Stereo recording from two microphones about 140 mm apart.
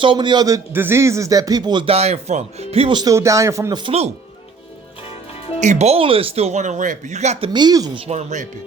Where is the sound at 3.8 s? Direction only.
45° right (ahead or behind).